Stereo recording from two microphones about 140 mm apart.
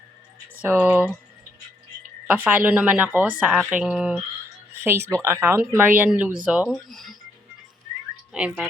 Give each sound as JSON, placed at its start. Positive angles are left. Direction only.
{"t": 0.6, "sound": "speech", "side_deg": -10}
{"t": 2.2, "sound": "speech", "side_deg": -10}
{"t": 4.7, "sound": "speech", "side_deg": -15}
{"t": 8.3, "sound": "speech", "side_deg": -10}